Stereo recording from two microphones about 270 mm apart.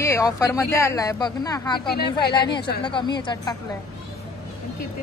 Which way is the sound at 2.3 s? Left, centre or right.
Centre.